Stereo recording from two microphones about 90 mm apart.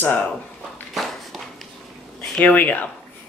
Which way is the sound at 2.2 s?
15° left (ahead or behind).